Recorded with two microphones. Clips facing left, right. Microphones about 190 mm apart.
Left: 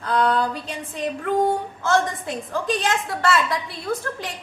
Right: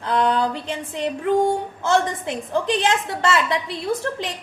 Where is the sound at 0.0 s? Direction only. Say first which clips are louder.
Right 1 dB; 20° right (ahead or behind).